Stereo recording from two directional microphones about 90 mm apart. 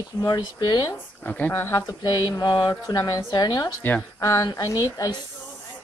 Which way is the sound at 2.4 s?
55° left (ahead or behind).